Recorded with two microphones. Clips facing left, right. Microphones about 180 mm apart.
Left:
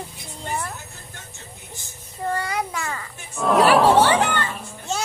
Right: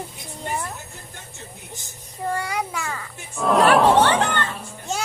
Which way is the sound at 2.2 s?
10° right (ahead or behind).